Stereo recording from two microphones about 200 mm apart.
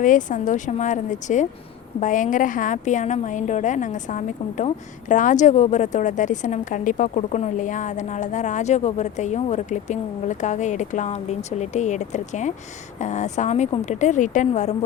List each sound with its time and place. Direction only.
0.0 s a woman's voice: 40° left (ahead or behind)